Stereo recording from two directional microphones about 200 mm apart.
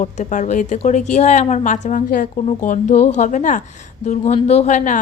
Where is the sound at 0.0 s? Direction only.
35° left (ahead or behind).